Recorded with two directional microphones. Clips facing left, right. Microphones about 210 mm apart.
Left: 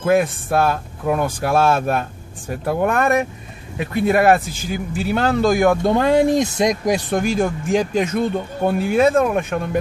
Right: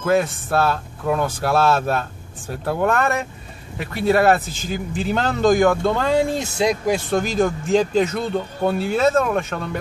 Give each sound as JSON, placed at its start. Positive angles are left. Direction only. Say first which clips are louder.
{"t": 0.0, "sound": "a man's voice", "louder": "left 2 dB", "side_deg": 15}